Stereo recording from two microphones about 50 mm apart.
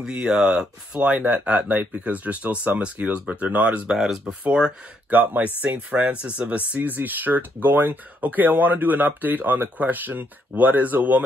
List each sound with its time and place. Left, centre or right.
0.0 s speech: centre
3.9 s speech: centre
5.1 s speech: right